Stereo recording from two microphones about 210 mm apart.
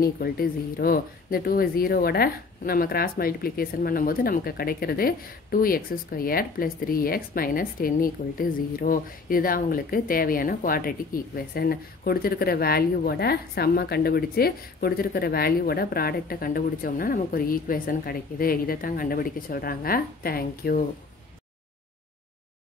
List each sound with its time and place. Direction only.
0.0 s speech: 45° left (ahead or behind)